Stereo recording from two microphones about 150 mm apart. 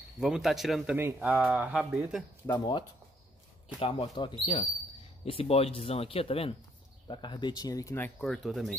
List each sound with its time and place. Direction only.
0.2 s speech: 5° right (ahead or behind)
0.9 s speech: 15° right (ahead or behind)
2.4 s speech: 15° left (ahead or behind)
4.1 s speech: 35° left (ahead or behind); by 8.1 s 20° left (ahead or behind)
8.2 s speech: centre (ahead or behind)